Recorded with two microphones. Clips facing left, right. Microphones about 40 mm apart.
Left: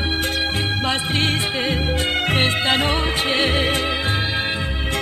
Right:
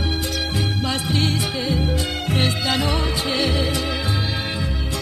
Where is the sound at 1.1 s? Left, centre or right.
Left.